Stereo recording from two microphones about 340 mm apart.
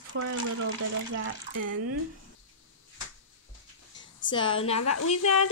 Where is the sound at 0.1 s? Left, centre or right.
Right.